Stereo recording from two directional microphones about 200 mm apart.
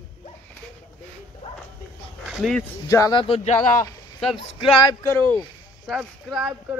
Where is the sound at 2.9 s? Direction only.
20° left (ahead or behind).